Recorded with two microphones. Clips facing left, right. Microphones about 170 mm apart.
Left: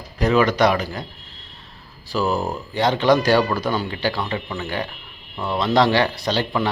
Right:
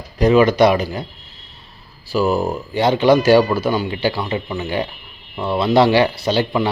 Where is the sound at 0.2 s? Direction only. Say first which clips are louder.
Right 5 dB; 15° right (ahead or behind).